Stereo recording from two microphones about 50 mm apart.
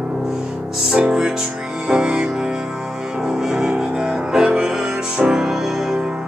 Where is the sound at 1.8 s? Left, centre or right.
Centre.